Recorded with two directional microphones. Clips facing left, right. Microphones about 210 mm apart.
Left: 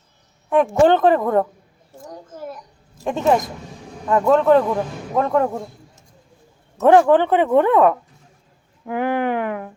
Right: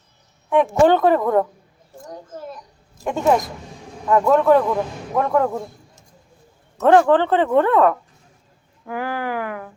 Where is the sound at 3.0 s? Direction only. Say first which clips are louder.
Even; 25° left (ahead or behind).